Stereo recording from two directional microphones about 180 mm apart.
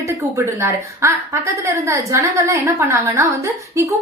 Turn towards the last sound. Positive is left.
turn(degrees=-15)  # may be behind; listen again after turning